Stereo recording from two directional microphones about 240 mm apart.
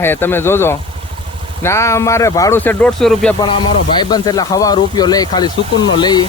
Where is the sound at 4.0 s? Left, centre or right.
Centre.